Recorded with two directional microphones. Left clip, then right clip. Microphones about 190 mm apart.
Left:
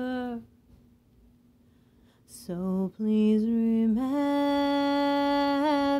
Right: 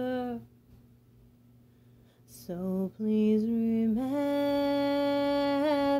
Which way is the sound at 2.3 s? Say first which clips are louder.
Left 2 dB; 25° left (ahead or behind).